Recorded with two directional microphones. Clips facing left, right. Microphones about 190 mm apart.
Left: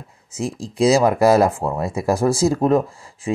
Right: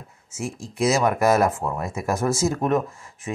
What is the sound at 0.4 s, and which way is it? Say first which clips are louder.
Speech: left 5 dB; 35° left (ahead or behind).